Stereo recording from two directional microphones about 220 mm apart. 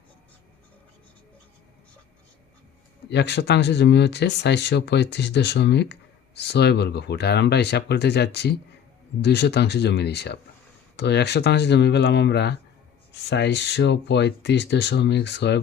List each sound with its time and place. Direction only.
3.1 s speech: 50° left (ahead or behind)